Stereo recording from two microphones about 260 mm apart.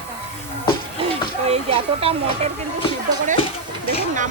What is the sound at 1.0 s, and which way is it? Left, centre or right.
Speech, right.